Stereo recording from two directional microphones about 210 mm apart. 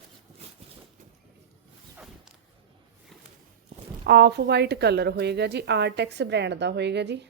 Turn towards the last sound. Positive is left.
turn(degrees=-55)  # may be behind; listen again after turning